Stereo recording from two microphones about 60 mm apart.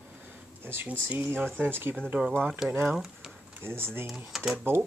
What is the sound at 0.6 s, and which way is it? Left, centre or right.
Speech, right.